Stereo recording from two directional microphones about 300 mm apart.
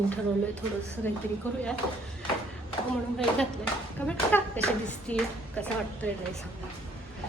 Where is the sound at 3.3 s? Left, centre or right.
Centre.